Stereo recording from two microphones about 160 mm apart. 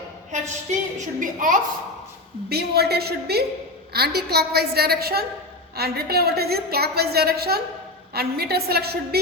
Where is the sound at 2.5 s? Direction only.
85° right.